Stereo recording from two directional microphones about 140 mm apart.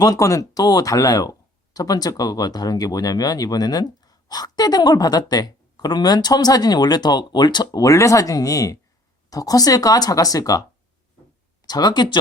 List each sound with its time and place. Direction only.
0.0 s speech: 25° left (ahead or behind)
11.6 s speech: 30° left (ahead or behind)